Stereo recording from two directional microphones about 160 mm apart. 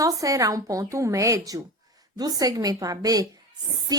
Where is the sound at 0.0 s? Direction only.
20° right (ahead or behind).